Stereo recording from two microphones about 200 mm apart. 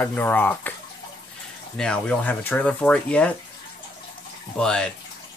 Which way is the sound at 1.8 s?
5° left (ahead or behind).